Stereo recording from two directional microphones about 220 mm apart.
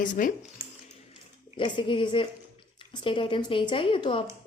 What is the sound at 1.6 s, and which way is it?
Speech, 20° left (ahead or behind).